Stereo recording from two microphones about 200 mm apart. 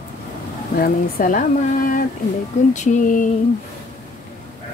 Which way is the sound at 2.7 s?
40° left (ahead or behind).